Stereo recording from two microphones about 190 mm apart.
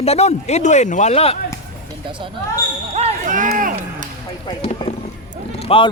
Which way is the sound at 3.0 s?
40° right (ahead or behind).